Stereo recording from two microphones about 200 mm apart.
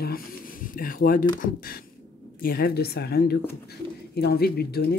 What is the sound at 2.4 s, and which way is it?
Speech, 50° left (ahead or behind).